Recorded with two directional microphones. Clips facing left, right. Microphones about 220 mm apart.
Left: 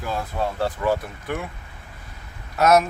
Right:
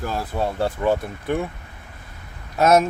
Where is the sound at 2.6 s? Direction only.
25° right (ahead or behind).